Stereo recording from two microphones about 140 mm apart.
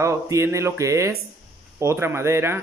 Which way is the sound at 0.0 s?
20° right (ahead or behind).